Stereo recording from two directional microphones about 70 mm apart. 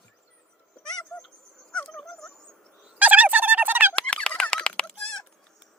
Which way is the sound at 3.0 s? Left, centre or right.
Right.